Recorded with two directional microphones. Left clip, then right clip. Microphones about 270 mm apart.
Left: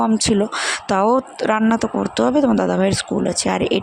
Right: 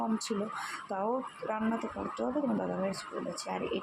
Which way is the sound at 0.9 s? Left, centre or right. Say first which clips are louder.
Left 17 dB; left.